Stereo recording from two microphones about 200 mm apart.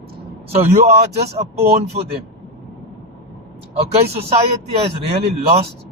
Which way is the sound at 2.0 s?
35° right (ahead or behind).